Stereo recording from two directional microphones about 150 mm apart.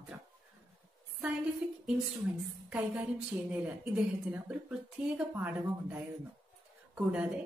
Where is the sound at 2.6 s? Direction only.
5° right (ahead or behind).